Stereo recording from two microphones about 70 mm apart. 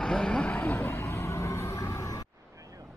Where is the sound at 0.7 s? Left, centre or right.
Left.